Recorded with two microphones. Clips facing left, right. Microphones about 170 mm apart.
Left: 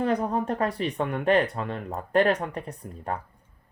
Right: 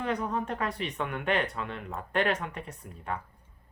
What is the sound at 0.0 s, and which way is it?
Speech, 35° left (ahead or behind).